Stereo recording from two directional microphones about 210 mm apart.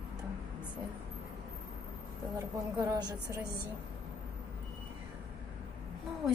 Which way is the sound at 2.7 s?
20° right (ahead or behind).